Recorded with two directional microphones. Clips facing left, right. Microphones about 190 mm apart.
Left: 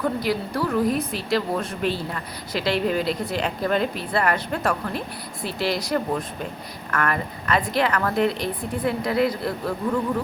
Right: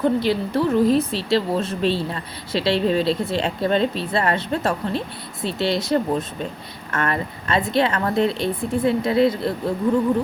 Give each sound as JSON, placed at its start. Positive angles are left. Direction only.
{"t": 0.0, "sound": "speech", "side_deg": -25}